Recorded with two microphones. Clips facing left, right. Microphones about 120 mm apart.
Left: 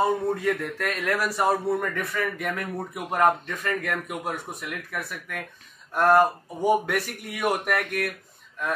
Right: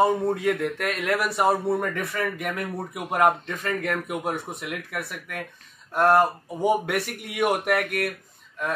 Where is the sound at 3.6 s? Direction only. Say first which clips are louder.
Right 2 dB; 30° right (ahead or behind).